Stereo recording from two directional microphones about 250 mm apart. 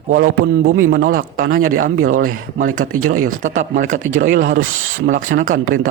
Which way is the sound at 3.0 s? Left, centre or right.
Right.